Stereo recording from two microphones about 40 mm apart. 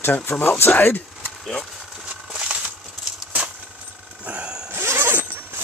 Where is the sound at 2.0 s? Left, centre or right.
Right.